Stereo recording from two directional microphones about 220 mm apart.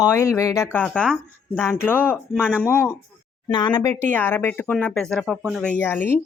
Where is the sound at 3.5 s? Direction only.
20° left (ahead or behind); by 5.8 s centre (ahead or behind).